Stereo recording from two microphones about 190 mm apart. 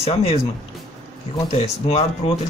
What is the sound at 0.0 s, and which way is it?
Speech, 30° left (ahead or behind).